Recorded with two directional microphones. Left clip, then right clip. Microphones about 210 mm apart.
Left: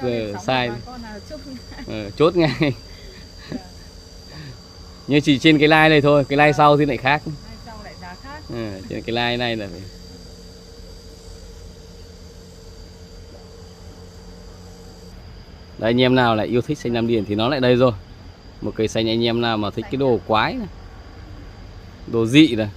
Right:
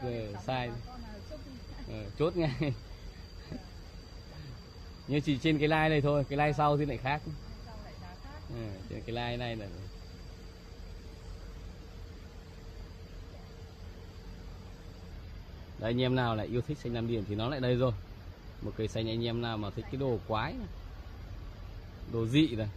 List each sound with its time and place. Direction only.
0.0 s speech: 10° left (ahead or behind)
1.9 s speech: 10° left (ahead or behind)
5.1 s speech: 10° left (ahead or behind)
8.5 s speech: 10° left (ahead or behind)
15.8 s speech: 5° left (ahead or behind)
22.1 s speech: 5° left (ahead or behind)